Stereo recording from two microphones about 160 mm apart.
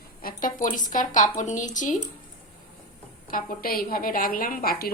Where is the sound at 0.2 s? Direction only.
65° left (ahead or behind).